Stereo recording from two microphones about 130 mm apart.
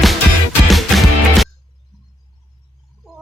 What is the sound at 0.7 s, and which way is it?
Music, centre (ahead or behind).